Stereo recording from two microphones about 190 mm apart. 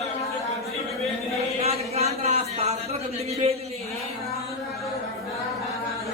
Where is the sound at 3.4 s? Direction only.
35° right (ahead or behind).